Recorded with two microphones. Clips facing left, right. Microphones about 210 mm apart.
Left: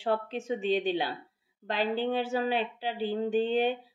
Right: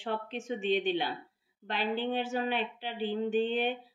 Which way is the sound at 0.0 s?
40° left (ahead or behind).